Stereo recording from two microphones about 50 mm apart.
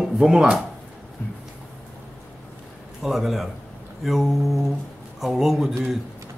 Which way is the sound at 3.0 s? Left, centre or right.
Centre.